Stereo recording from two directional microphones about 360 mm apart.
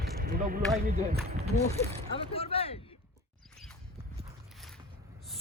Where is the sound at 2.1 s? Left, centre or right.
Centre.